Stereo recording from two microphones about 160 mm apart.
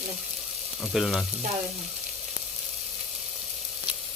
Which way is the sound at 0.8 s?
Centre (ahead or behind).